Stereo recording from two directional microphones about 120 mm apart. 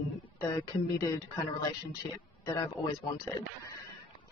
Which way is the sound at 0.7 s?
35° left (ahead or behind).